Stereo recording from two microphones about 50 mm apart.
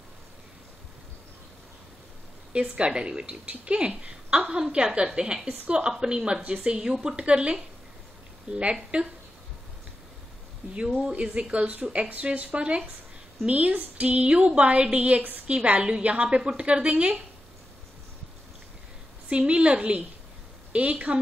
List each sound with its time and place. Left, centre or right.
2.7 s a woman's voice: centre
11.0 s a woman's voice: centre
19.2 s a woman's voice: right